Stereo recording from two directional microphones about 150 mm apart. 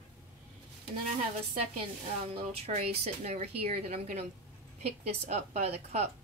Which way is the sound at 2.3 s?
40° right (ahead or behind).